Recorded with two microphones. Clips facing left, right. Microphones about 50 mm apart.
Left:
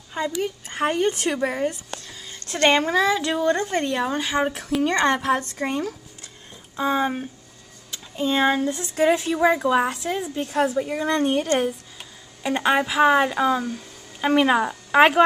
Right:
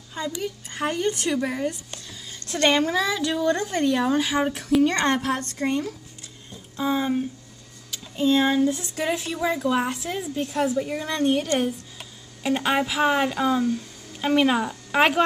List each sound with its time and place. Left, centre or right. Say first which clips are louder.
0.2 s a woman's voice: left 4 dB; left
5.0 s a woman's voice: left 3 dB; centre
9.0 s speech: left 7 dB; centre
9.4 s a woman's voice: left 2 dB; centre
10.8 s a woman's voice: left 3 dB; centre